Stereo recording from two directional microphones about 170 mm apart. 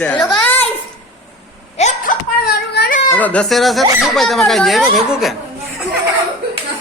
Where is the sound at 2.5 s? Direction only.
70° left (ahead or behind).